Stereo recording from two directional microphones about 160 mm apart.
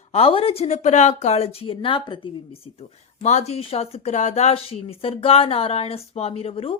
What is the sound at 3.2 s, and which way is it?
Speech, 45° left (ahead or behind).